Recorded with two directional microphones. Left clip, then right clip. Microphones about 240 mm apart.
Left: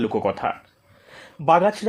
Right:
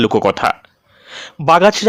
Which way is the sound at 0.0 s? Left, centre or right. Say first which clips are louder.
Right 9 dB; right.